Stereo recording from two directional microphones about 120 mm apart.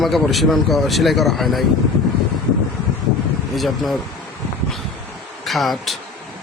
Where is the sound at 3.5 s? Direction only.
Centre (ahead or behind).